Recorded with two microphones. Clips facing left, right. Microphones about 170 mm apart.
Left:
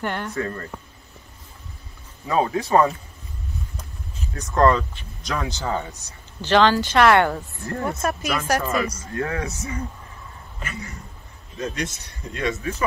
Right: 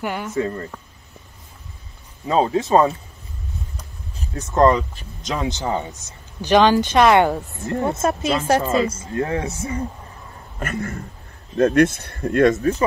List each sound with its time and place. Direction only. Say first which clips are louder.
0.0 s speech: right 1 dB; 5° right (ahead or behind)
0.3 s speech: right 4 dB; 20° right (ahead or behind)
2.2 s speech: right 3 dB; 25° right (ahead or behind)
4.2 s speech: right 2 dB; 25° right (ahead or behind)
10.6 s speech: right 9 dB; 55° right (ahead or behind); by 12.8 s 35° right (ahead or behind)